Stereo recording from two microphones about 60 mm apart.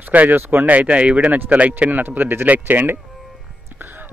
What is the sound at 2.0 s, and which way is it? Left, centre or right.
Speech, right.